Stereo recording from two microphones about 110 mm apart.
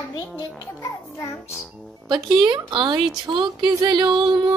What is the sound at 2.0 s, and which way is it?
Speech, 40° right (ahead or behind).